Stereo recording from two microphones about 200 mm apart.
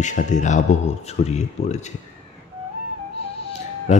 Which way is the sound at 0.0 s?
35° left (ahead or behind).